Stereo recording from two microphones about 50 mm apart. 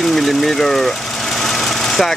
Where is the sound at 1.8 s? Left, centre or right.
Centre.